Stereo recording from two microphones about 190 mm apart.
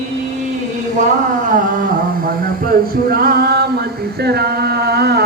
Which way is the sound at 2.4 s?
50° right (ahead or behind).